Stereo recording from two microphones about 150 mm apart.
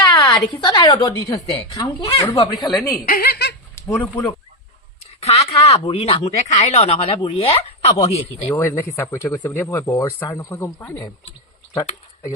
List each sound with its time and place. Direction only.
0.1 s a woman's voice: 25° left (ahead or behind)
3.1 s giggle: 85° left
3.8 s speech: 15° left (ahead or behind)
5.2 s a woman's voice: 45° left (ahead or behind)
8.4 s speech: 15° left (ahead or behind)